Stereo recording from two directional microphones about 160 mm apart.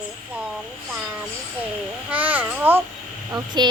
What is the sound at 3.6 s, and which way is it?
Speech, 25° right (ahead or behind).